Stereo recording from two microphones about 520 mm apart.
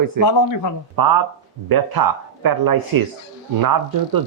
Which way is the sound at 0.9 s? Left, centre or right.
Right.